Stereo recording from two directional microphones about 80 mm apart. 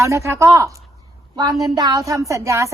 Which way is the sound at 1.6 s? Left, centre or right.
Right.